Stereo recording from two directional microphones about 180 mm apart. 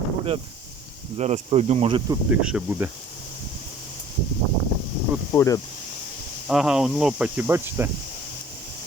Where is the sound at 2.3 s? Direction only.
5° right (ahead or behind).